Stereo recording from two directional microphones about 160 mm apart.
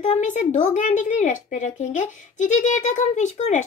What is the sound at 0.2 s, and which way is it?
Speech, 50° left (ahead or behind).